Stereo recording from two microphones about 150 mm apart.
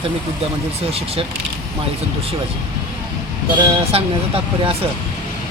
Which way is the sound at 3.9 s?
40° right (ahead or behind).